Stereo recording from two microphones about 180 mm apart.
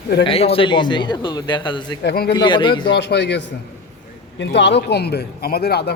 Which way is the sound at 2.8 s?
70° left (ahead or behind).